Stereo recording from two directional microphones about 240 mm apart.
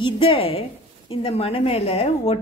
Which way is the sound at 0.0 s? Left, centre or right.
Left.